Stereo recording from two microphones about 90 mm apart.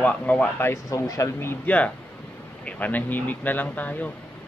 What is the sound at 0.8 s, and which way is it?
Speech, 40° left (ahead or behind).